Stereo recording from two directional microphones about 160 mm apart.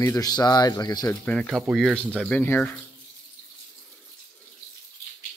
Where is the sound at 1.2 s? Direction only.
5° left (ahead or behind).